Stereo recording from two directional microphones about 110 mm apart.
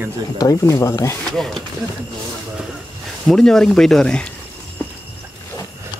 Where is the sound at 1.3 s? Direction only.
5° left (ahead or behind).